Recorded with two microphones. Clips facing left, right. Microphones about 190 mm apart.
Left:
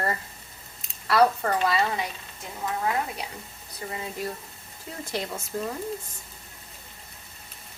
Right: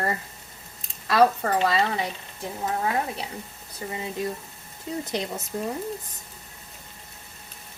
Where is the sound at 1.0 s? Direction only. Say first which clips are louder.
Right 1 dB; 20° right (ahead or behind).